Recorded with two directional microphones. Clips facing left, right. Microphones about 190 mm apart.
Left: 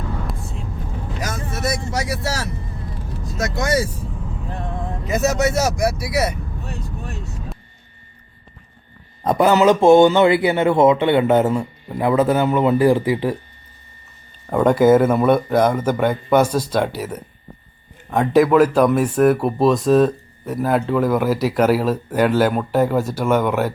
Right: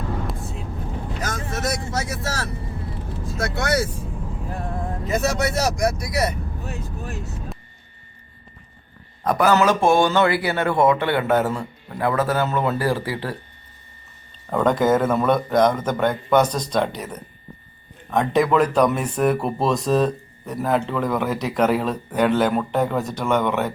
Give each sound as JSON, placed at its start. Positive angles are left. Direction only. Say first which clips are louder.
{"t": 0.3, "sound": "vehicle", "louder": "even", "side_deg": 0}
{"t": 1.2, "sound": "speech", "louder": "left 2 dB", "side_deg": 10}
{"t": 3.5, "sound": "speech", "louder": "left 2 dB", "side_deg": 15}
{"t": 5.0, "sound": "speech", "louder": "left 4 dB", "side_deg": 10}
{"t": 6.7, "sound": "vehicle", "louder": "even", "side_deg": -5}
{"t": 9.2, "sound": "speech", "louder": "left 3 dB", "side_deg": 25}
{"t": 14.5, "sound": "speech", "louder": "left 5 dB", "side_deg": 10}